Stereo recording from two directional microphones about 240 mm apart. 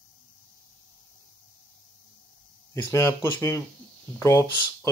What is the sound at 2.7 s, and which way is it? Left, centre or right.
Speech, centre.